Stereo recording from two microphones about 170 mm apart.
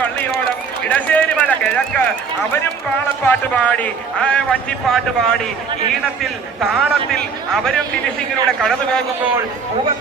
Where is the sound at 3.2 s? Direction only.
10° left (ahead or behind).